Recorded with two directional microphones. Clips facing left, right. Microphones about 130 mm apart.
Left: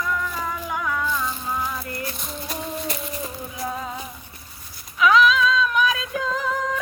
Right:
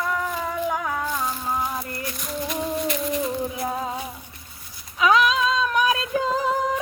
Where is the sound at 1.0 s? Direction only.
45° right (ahead or behind).